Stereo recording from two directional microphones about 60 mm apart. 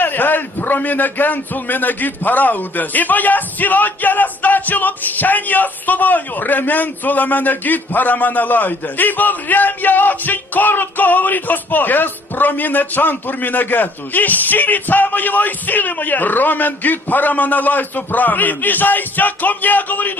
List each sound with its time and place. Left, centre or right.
0.0 s a man's voice: left